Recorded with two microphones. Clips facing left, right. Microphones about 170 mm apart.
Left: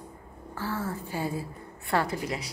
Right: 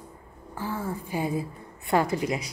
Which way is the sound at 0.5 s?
15° right (ahead or behind).